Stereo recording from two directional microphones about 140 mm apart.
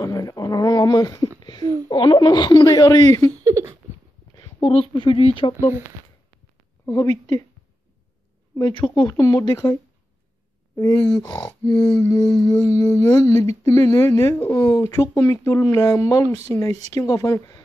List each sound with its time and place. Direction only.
0.0 s a woman's voice: 25° left (ahead or behind)
3.4 s a sound: 20° right (ahead or behind)
4.4 s a woman's voice: 35° left (ahead or behind)
6.9 s speech: 25° left (ahead or behind)
8.5 s speech: 30° left (ahead or behind)
11.1 s speech: 25° left (ahead or behind)